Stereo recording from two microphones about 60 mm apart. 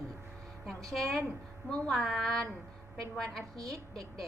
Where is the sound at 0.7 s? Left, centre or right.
Centre.